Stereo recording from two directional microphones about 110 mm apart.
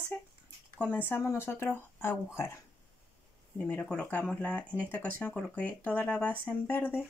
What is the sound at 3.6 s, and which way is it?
Speech, 10° left (ahead or behind).